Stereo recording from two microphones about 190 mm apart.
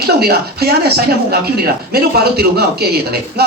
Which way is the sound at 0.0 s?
55° right (ahead or behind).